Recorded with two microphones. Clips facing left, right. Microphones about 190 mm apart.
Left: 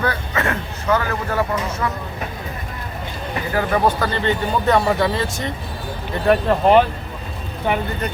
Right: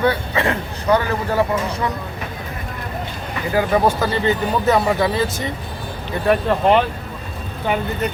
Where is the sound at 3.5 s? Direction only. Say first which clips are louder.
Right 2 dB; 10° right (ahead or behind).